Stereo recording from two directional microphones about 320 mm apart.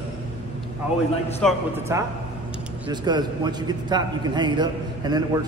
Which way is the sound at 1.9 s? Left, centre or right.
Centre.